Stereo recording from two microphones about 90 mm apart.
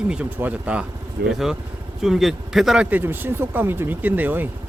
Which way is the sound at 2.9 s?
20° right (ahead or behind).